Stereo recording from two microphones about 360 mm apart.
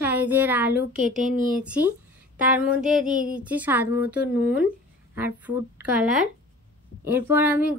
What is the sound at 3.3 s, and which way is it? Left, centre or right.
Speech, centre.